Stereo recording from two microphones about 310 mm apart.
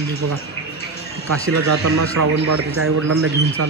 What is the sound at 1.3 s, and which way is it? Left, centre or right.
A man's voice, right.